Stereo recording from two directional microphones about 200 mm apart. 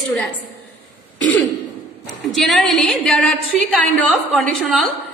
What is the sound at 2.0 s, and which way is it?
A woman's voice, centre (ahead or behind).